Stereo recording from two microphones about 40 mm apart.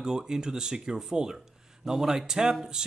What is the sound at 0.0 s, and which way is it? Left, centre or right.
Speech, centre.